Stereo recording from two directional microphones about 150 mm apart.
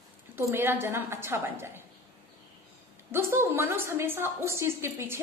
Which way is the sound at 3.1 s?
15° right (ahead or behind).